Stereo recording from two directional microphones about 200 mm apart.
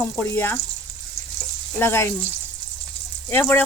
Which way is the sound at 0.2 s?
10° left (ahead or behind).